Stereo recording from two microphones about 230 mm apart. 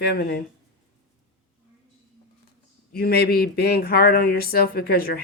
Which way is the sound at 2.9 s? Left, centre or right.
Left.